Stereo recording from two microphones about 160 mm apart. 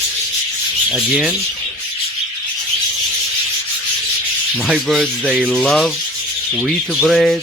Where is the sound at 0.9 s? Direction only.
Centre (ahead or behind).